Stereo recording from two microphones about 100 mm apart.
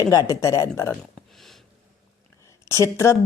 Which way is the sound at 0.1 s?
35° left (ahead or behind).